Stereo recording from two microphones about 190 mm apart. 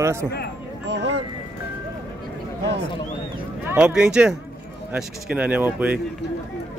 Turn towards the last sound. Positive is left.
turn(degrees=-10)  # may be behind; listen again after turning